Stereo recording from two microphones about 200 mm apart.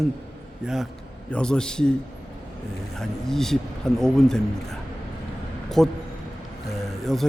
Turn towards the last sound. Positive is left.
turn(degrees=0)  # may be behind; listen again after turning